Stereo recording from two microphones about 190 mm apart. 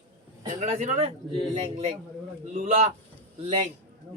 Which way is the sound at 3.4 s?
30° right (ahead or behind).